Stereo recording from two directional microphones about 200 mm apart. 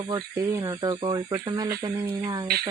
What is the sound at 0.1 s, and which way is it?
Speech, 20° right (ahead or behind).